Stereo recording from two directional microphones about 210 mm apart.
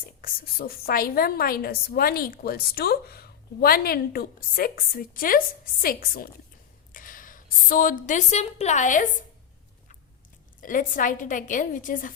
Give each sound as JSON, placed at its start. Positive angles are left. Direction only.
{"t": 0.2, "sound": "a woman's voice", "side_deg": 45}
{"t": 10.6, "sound": "a woman's voice", "side_deg": 40}